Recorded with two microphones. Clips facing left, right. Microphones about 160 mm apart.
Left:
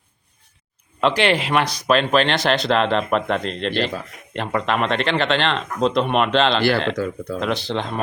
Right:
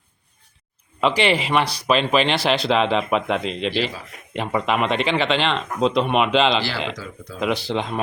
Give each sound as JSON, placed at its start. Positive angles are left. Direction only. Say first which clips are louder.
{"t": 1.0, "sound": "speech", "louder": "left 1 dB", "side_deg": 0}
{"t": 6.6, "sound": "speech", "louder": "left 7 dB", "side_deg": 60}
{"t": 7.3, "sound": "speech", "louder": "right 2 dB", "side_deg": -5}